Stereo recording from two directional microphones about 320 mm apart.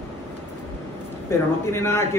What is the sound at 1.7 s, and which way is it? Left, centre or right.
Speech, centre.